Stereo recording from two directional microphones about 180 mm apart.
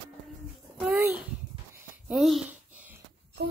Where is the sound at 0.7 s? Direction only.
5° right (ahead or behind).